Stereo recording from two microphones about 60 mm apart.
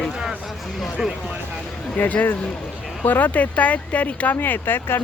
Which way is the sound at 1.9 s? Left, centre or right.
Left.